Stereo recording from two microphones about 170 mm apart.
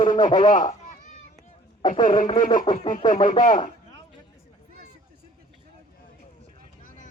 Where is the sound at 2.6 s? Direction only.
30° left (ahead or behind).